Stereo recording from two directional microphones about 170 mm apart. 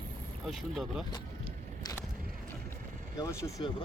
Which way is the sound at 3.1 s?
20° left (ahead or behind).